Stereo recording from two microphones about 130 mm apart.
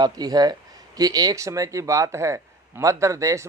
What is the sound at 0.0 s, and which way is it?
Speech, 30° right (ahead or behind).